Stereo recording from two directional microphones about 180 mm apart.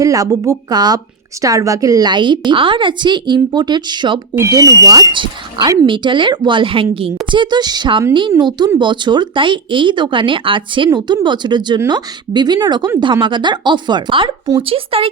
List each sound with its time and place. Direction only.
0.0 s a woman's voice: 20° right (ahead or behind)